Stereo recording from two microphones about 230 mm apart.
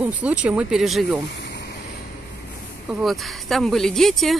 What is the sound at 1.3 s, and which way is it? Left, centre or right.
Vehicle, left.